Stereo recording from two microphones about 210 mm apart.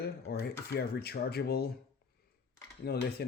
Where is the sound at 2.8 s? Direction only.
50° left (ahead or behind).